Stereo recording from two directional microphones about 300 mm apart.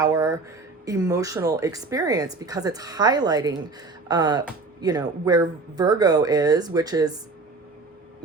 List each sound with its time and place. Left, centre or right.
0.0 s speech: centre